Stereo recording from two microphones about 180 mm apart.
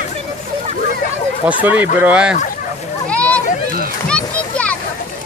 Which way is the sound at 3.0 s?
5° left (ahead or behind).